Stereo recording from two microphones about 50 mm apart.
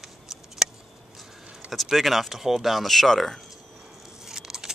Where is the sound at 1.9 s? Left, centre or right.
Centre.